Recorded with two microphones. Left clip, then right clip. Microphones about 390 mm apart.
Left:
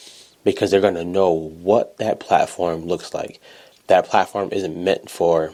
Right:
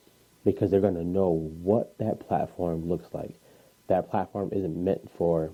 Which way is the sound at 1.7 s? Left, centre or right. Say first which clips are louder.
Left 9 dB; centre.